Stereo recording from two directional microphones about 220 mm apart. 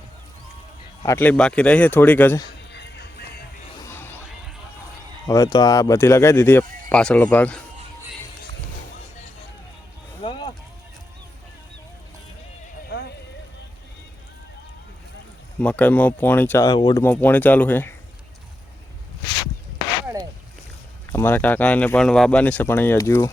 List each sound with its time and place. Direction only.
1.0 s speech: 10° left (ahead or behind)
2.7 s music: 50° left (ahead or behind)
3.8 s a sound: 10° left (ahead or behind)
5.2 s speech: 15° left (ahead or behind)
10.2 s a sound: 20° left (ahead or behind)
12.9 s clip-clop: 50° left (ahead or behind)
15.6 s speech: 5° left (ahead or behind)
21.1 s speech: 10° left (ahead or behind)